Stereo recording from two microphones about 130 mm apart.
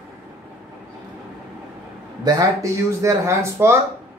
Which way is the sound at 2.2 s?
25° right (ahead or behind).